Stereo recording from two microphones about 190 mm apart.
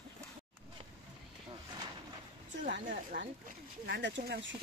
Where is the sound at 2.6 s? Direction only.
50° right (ahead or behind); by 4.5 s 70° right (ahead or behind).